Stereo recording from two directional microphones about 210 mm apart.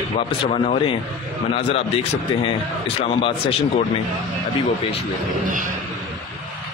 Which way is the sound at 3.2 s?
25° left (ahead or behind).